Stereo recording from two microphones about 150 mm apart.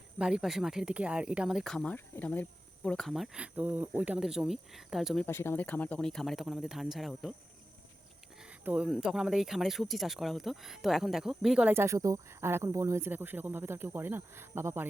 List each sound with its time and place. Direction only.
0.2 s speech: 5° right (ahead or behind)
5.2 s speech: 15° left (ahead or behind); by 7.3 s centre (ahead or behind)
8.4 s speech: 10° right (ahead or behind)
11.7 s speech: 15° right (ahead or behind)